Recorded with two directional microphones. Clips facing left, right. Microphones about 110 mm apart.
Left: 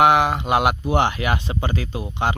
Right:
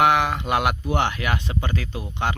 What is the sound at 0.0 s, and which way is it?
Speech, 20° left (ahead or behind).